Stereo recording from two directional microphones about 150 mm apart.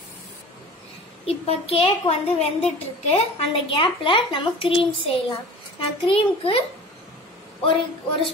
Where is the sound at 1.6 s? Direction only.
40° left (ahead or behind).